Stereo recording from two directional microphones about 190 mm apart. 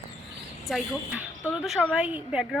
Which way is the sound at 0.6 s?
Centre (ahead or behind).